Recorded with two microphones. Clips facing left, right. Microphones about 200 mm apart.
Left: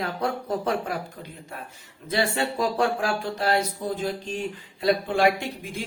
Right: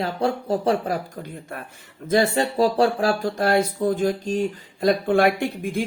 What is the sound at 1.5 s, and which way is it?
Speech, 60° right (ahead or behind).